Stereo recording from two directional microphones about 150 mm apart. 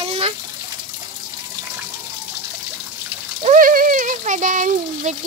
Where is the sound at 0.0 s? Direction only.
45° right (ahead or behind).